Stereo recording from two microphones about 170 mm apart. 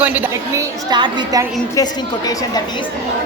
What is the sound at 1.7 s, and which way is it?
Speech, 20° left (ahead or behind).